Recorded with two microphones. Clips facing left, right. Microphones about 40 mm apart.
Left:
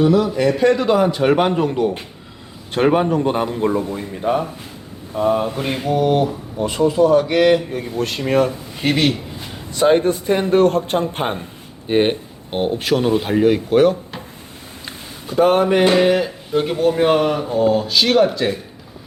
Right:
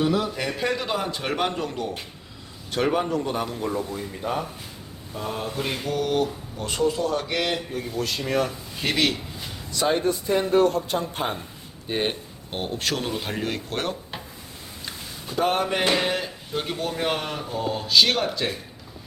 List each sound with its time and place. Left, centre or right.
0.0 s speech: centre
1.0 s a man's voice: centre
2.7 s a man's voice: left; by 7.9 s centre
7.9 s a man's voice: left
8.4 s speech: left
9.9 s a man's voice: left; by 13.9 s centre
15.3 s speech: centre